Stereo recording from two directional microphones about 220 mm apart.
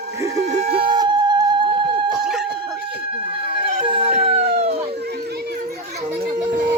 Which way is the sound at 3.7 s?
25° right (ahead or behind).